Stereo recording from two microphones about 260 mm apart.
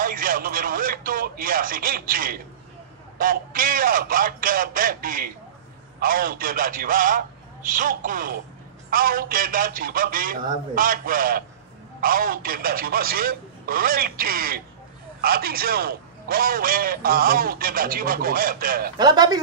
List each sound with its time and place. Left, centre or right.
0.0 s a man's voice: right
18.9 s a man's voice: centre